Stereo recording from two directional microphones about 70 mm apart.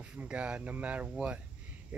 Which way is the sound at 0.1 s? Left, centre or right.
Centre.